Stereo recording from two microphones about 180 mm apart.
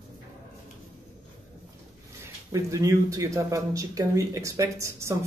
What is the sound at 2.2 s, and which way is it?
Speech, 15° right (ahead or behind).